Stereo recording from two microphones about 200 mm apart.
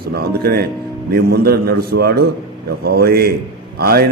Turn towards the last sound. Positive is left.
turn(degrees=-50)  # may be behind; listen again after turning